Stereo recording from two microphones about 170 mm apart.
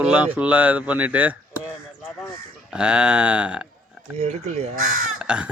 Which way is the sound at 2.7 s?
5° right (ahead or behind).